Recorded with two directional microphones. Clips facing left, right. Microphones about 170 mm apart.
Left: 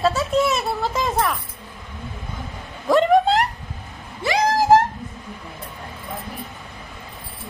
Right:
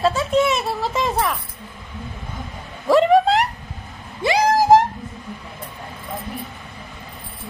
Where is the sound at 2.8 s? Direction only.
Centre (ahead or behind).